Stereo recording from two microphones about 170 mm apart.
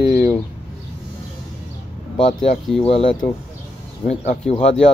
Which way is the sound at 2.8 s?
35° left (ahead or behind).